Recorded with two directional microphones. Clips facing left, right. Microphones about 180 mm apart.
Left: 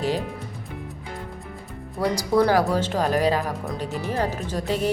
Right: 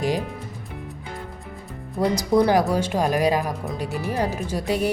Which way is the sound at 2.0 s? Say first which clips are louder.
Right 1 dB; 20° right (ahead or behind).